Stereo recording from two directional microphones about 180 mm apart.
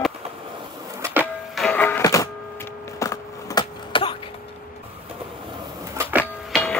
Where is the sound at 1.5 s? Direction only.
5° left (ahead or behind); by 4.1 s 25° left (ahead or behind).